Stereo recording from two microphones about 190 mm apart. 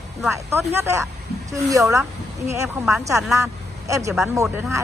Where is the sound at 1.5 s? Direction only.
15° right (ahead or behind).